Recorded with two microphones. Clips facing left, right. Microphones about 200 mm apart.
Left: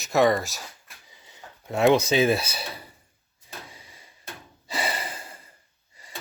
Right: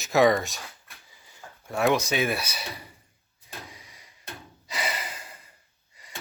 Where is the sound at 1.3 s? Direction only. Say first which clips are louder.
Left 4 dB; 20° left (ahead or behind).